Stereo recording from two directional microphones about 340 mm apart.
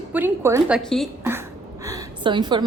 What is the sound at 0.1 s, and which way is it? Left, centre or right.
A woman's voice, centre.